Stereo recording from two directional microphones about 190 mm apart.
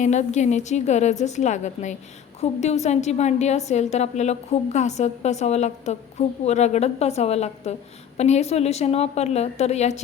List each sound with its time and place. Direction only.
0.0 s a woman's voice: 40° left (ahead or behind)